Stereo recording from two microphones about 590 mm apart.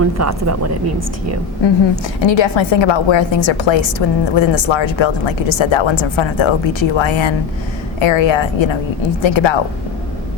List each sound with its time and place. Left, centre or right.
0.0 s a woman's voice: right
2.2 s a woman's voice: left